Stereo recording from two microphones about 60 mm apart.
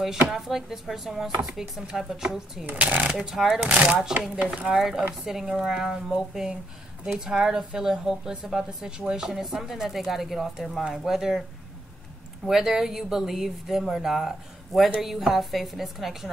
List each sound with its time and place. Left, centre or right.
0.3 s a woman's voice: centre
2.6 s speech: right
3.2 s speech: centre
3.6 s speech: centre
4.7 s a woman's voice: centre
12.4 s speech: centre